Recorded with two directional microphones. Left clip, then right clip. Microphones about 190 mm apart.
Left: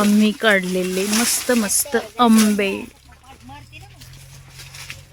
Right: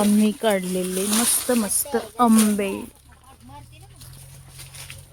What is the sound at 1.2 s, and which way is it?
Speech, 25° left (ahead or behind).